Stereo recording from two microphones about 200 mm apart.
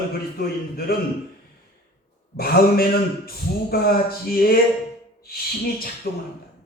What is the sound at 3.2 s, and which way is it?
A man's voice, 50° left (ahead or behind).